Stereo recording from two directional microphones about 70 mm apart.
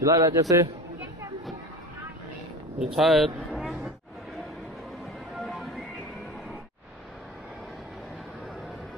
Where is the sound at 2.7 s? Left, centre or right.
Centre.